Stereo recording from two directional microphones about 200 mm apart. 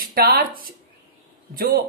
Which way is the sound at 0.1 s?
45° right (ahead or behind).